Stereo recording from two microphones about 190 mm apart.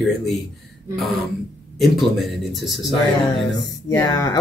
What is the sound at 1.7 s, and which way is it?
A man's voice, centre (ahead or behind).